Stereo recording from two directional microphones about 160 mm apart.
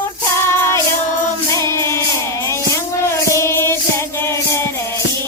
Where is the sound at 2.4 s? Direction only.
20° left (ahead or behind).